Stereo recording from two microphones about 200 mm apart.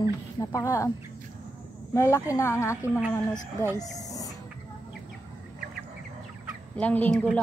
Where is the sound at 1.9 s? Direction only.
15° left (ahead or behind).